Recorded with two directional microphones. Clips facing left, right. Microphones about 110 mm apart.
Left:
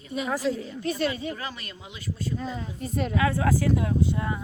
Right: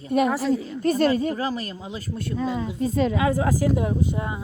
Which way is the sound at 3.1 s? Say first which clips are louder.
Right 2 dB; 20° right (ahead or behind).